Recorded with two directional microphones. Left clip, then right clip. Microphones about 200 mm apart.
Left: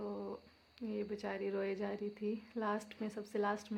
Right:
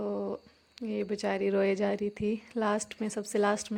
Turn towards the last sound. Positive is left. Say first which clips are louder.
# right 9 dB
turn(degrees=-40)  # may be behind; listen again after turning